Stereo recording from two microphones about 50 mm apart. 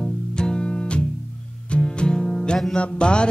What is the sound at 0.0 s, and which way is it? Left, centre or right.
Music, centre.